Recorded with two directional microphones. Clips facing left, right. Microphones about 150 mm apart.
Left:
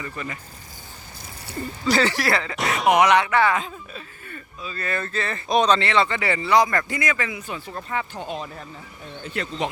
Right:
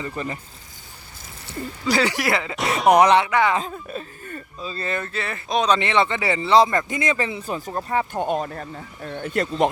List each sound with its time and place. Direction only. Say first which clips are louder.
0.0 s speech: right 4 dB; 30° right (ahead or behind)
1.9 s speech: even; 10° right (ahead or behind)
2.6 s speech: right 4 dB; centre (ahead or behind)
3.0 s speech: even; 30° right (ahead or behind)
3.2 s speech: even; 15° right (ahead or behind)
3.6 s speech: right 5 dB; 40° right (ahead or behind)
4.7 s speech: right 1 dB; 25° right (ahead or behind)
4.9 s speech: left 1 dB; 10° right (ahead or behind); by 8.0 s 40° right (ahead or behind)
8.1 s speech: right 7 dB; 55° right (ahead or behind)